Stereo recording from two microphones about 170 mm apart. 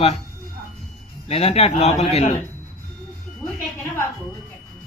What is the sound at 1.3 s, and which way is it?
A man's voice, 35° left (ahead or behind).